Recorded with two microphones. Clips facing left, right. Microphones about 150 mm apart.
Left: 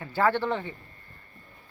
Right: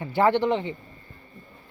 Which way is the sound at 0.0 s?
20° right (ahead or behind).